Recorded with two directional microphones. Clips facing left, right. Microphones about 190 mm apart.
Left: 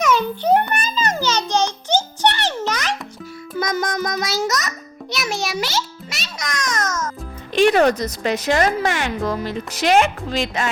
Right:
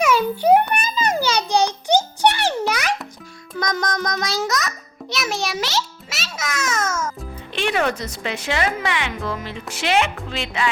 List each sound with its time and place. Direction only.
0.0 s a sound: 10° right (ahead or behind)
3.5 s music: 5° left (ahead or behind)
7.5 s a woman's voice: 40° left (ahead or behind)